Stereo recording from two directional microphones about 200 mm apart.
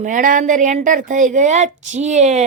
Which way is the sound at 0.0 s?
40° right (ahead or behind).